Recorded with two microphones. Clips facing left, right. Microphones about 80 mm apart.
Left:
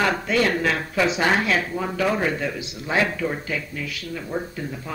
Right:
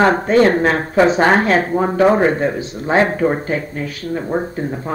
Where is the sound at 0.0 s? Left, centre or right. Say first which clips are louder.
Right 9 dB; right.